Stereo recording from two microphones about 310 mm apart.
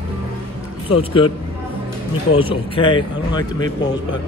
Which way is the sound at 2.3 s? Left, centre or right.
Centre.